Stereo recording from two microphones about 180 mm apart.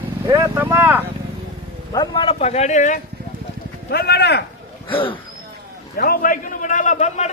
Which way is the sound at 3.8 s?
60° left (ahead or behind).